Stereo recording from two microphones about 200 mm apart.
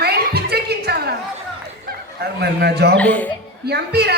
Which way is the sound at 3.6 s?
55° right (ahead or behind).